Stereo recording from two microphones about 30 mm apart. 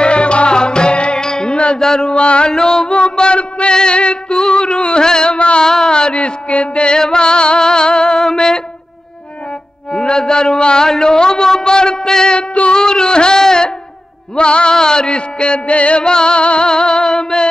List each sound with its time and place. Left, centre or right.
0.0 s music: left
1.8 s mantra: left
2.5 s music: left
5.0 s carnatic music: left
5.6 s music: left
9.9 s a sound: left
10.9 s a man's voice: left
13.4 s music: left
14.3 s music: left
16.0 s a man's voice: left